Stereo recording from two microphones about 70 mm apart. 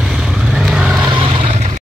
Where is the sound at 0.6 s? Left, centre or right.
Centre.